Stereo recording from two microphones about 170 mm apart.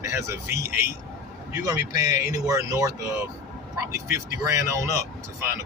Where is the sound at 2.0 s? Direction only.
20° right (ahead or behind).